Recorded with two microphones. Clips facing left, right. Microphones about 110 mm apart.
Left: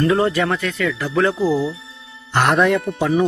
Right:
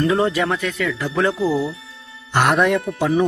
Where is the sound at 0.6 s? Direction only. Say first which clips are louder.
Left 1 dB; 15° right (ahead or behind).